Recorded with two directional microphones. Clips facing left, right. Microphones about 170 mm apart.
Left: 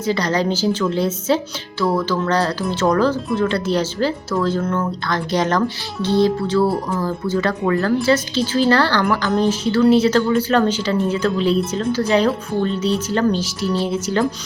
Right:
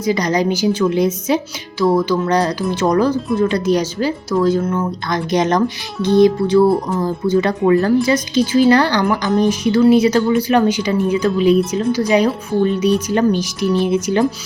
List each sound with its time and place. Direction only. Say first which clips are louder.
0.0 s speech: right 3 dB; 15° right (ahead or behind)